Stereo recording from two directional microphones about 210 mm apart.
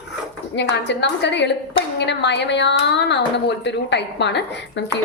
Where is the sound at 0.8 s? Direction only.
55° left (ahead or behind).